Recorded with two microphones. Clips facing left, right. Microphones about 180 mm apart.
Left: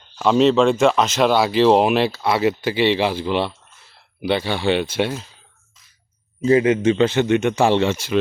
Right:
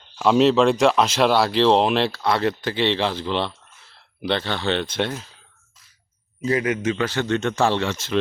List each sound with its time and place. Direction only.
0.2 s speech: centre (ahead or behind)
6.4 s a man's voice: 25° left (ahead or behind)